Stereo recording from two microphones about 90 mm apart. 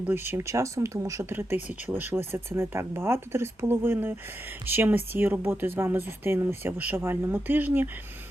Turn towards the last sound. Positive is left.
turn(degrees=-20)  # may be behind; listen again after turning